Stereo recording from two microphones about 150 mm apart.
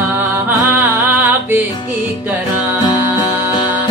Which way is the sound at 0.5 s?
15° right (ahead or behind).